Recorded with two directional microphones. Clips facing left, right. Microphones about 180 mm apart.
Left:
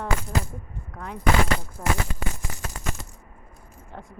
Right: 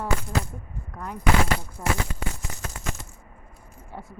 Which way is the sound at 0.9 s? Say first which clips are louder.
Even; centre (ahead or behind).